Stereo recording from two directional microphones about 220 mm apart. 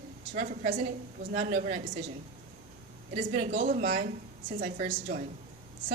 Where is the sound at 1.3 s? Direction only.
35° right (ahead or behind).